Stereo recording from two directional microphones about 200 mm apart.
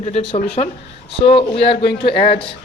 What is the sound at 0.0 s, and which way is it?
Speech, 30° left (ahead or behind).